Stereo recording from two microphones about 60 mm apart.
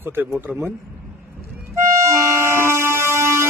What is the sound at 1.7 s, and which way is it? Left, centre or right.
Vehicle, right.